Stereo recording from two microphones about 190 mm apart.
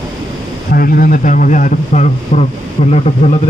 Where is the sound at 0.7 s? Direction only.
50° left (ahead or behind).